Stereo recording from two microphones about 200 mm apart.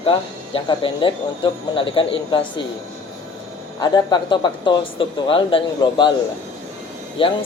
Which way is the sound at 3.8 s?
20° left (ahead or behind).